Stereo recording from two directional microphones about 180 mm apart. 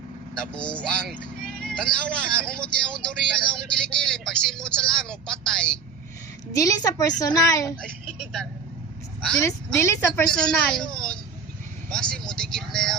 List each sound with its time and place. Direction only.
0.3 s a woman's voice: 5° left (ahead or behind)
6.5 s a woman's voice: 20° left (ahead or behind)
9.2 s a woman's voice: 5° left (ahead or behind)
10.2 s a woman's voice: 5° left (ahead or behind)